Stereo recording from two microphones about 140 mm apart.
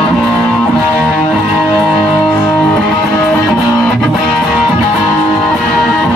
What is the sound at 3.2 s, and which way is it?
Music, 20° left (ahead or behind).